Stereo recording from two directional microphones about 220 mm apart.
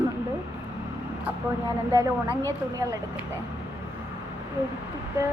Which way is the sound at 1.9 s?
15° right (ahead or behind).